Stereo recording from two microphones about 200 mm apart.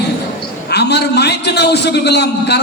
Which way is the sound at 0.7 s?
55° left (ahead or behind).